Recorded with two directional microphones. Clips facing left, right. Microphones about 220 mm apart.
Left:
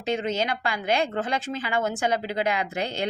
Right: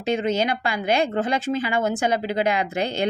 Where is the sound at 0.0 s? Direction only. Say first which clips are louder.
Right 4 dB; 10° right (ahead or behind).